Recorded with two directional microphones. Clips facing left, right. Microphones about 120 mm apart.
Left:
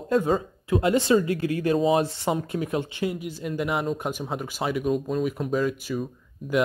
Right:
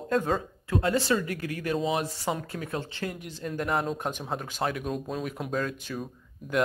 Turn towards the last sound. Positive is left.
turn(degrees=5)  # may be behind; listen again after turning